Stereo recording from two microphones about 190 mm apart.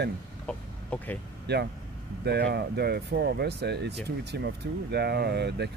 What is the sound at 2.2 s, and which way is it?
Speech, 60° right (ahead or behind).